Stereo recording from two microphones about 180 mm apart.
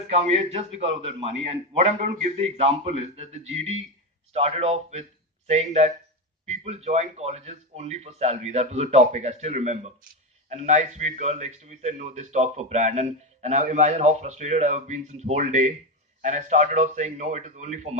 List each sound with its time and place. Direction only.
0.1 s a man's voice: 35° right (ahead or behind)